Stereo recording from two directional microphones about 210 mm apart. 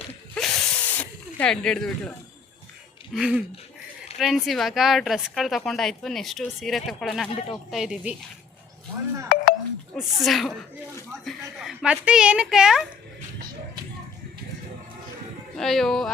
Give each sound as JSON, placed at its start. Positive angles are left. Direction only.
{"t": 0.3, "sound": "a sound", "side_deg": 5}
{"t": 3.1, "sound": "a woman's voice", "side_deg": -5}
{"t": 9.3, "sound": "telephone dialing", "side_deg": 40}
{"t": 9.9, "sound": "a woman's voice", "side_deg": 0}
{"t": 15.5, "sound": "a woman's voice", "side_deg": 0}